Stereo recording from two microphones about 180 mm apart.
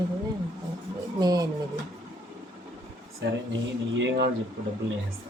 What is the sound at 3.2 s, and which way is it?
Speech, 85° right.